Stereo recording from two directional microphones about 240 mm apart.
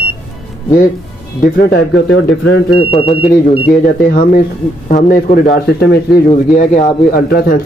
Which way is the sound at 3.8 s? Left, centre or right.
Left.